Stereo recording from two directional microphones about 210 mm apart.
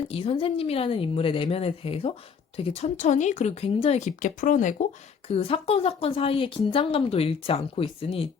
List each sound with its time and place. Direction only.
0.1 s speech: 25° left (ahead or behind)
5.3 s speech: 25° left (ahead or behind)